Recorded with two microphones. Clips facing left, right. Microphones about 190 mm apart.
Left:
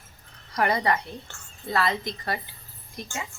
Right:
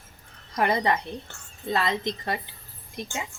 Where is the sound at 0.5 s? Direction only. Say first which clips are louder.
Even; 25° right (ahead or behind).